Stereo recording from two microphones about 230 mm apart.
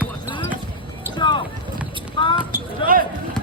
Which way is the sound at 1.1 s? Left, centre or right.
Centre.